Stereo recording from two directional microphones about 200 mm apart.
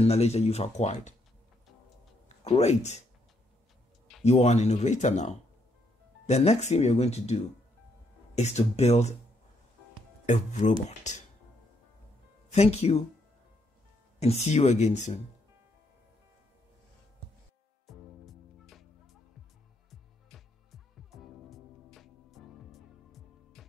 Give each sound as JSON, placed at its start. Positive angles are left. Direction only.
{"t": 0.0, "sound": "speech", "side_deg": 30}
{"t": 2.2, "sound": "speech", "side_deg": 35}
{"t": 4.2, "sound": "speech", "side_deg": 35}
{"t": 8.4, "sound": "speech", "side_deg": 35}
{"t": 10.2, "sound": "speech", "side_deg": 35}
{"t": 12.4, "sound": "speech", "side_deg": 30}
{"t": 14.2, "sound": "speech", "side_deg": 35}
{"t": 17.8, "sound": "music", "side_deg": 0}
{"t": 19.9, "sound": "music", "side_deg": 0}